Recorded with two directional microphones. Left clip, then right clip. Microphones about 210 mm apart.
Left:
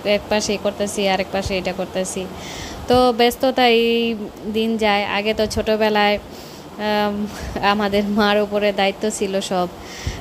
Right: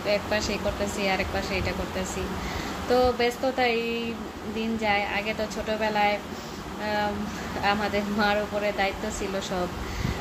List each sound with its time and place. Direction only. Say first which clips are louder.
0.0 s speech: left 7 dB; 40° left (ahead or behind)